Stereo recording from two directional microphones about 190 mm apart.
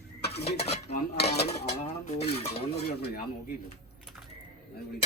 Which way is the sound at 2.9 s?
55° left (ahead or behind).